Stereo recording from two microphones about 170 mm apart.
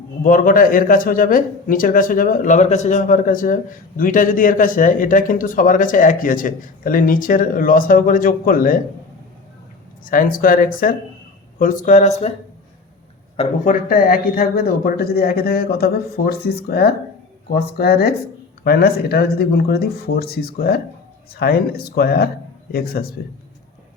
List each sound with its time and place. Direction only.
0.2 s speech: 55° left (ahead or behind)
10.1 s speech: 55° left (ahead or behind)
13.3 s a man's voice: 35° left (ahead or behind)
13.7 s speech: 55° left (ahead or behind)